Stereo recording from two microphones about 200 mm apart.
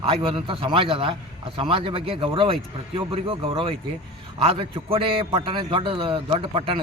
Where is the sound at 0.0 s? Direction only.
30° right (ahead or behind).